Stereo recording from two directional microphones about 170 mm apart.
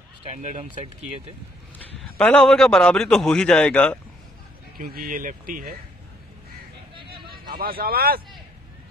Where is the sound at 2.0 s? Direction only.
5° left (ahead or behind).